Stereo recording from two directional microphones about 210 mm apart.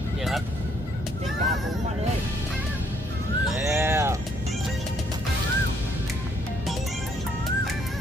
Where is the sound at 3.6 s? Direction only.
10° right (ahead or behind).